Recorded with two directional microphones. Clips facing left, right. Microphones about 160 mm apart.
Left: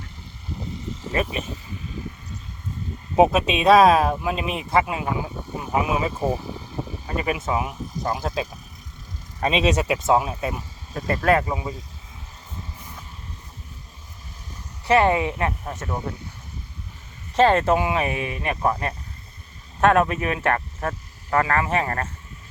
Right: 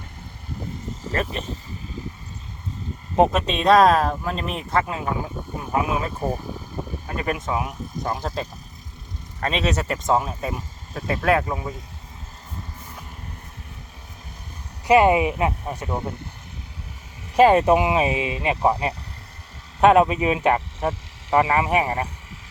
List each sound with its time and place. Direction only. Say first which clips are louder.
1.1 s speech: left 1 dB; 10° left (ahead or behind)
3.2 s speech: left 2 dB; 10° left (ahead or behind)
9.4 s speech: left 3 dB; 15° left (ahead or behind)
14.8 s speech: right 3 dB; 15° right (ahead or behind)
17.3 s speech: right 3 dB; 10° right (ahead or behind)
19.8 s speech: right 3 dB; 15° right (ahead or behind)